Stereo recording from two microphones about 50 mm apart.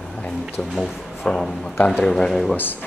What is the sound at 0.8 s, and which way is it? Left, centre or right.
Speech, centre.